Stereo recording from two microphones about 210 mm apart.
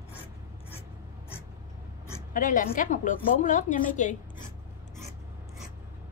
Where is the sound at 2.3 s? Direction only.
40° left (ahead or behind).